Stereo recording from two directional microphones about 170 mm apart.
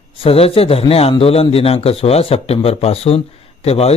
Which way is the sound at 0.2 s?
35° left (ahead or behind).